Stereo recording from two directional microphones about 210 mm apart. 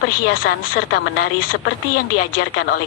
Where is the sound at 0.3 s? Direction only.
55° left (ahead or behind).